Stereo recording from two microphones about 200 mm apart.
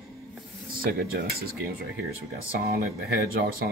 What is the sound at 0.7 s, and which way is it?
Speech, 45° right (ahead or behind).